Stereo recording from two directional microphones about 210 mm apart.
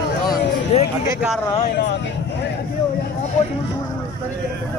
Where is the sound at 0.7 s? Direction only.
30° left (ahead or behind).